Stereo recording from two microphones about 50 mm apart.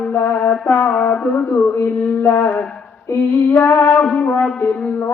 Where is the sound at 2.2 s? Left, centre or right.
Left.